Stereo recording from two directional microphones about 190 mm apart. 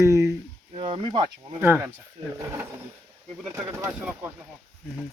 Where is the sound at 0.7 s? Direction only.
30° right (ahead or behind).